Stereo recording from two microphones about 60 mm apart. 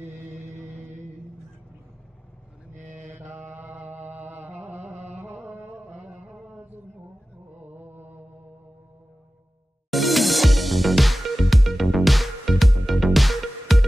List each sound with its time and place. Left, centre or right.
0.1 s music: right
3.3 s mantra: right
3.7 s chant: right
4.6 s a sound: right
5.3 s music: right
6.1 s mantra: centre
7.6 s mantra: right
9.8 s music: centre